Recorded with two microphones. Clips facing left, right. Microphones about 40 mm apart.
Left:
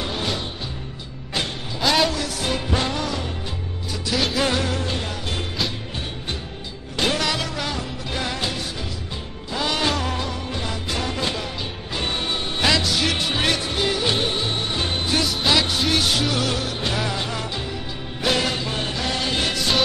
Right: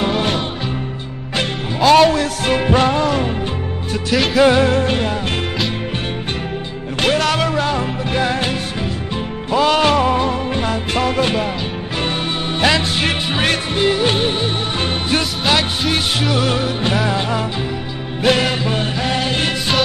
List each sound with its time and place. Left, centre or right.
1.9 s music: right
4.1 s music: centre
4.4 s music: right
7.0 s music: right
12.5 s music: right
12.8 s music: right